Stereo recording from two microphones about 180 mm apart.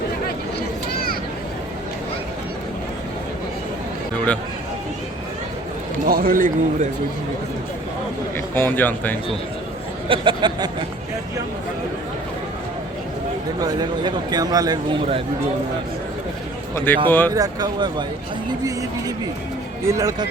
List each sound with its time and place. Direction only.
6.1 s a man's voice: 55° right (ahead or behind)
8.5 s speech: 10° left (ahead or behind)
10.1 s speech: 25° right (ahead or behind)
13.6 s speech: 20° right (ahead or behind)
16.7 s speech: 10° left (ahead or behind)
17.3 s speech: 20° right (ahead or behind)